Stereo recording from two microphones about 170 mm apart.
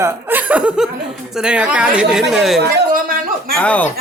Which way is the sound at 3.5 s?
10° left (ahead or behind).